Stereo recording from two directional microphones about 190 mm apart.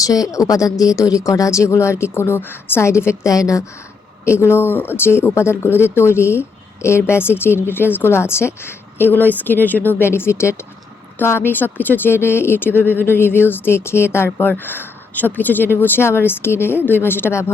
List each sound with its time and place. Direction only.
0.0 s speech: 20° left (ahead or behind)